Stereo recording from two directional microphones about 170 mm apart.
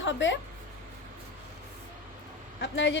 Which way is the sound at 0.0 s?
90° left.